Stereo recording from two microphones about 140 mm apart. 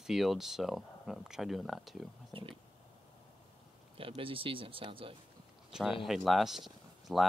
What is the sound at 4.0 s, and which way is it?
Speech, 40° right (ahead or behind).